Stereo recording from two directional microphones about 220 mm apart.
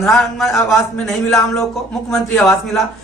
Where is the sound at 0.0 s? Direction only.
Centre (ahead or behind).